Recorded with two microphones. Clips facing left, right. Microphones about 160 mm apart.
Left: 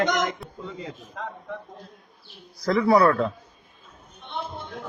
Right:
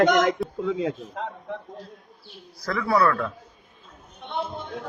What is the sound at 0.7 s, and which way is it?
Speech, 90° right.